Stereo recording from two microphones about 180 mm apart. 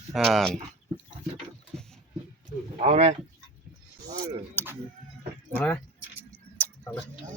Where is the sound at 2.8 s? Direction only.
35° right (ahead or behind).